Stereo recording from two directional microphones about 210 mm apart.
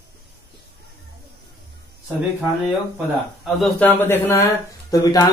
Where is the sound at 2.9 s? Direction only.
Centre (ahead or behind).